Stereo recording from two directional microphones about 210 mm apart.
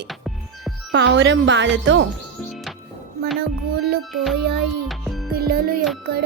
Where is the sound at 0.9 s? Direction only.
55° right (ahead or behind).